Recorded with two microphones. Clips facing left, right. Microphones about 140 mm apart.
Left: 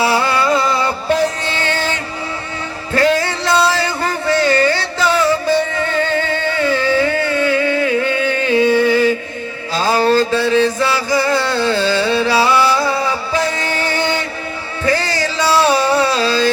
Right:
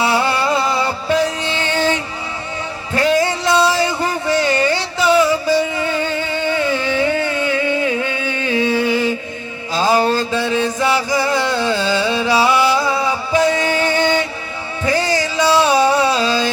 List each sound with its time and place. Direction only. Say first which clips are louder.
0.0 s music: left 1 dB; 20° right (ahead or behind)
2.9 s a sound: left 1 dB; 15° right (ahead or behind)
8.9 s music: left 4 dB; 20° right (ahead or behind)